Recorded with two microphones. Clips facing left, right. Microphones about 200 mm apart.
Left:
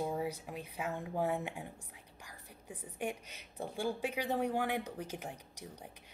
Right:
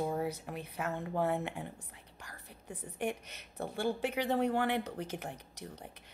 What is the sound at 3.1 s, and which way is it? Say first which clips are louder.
Speech: right 3 dB; 60° right (ahead or behind).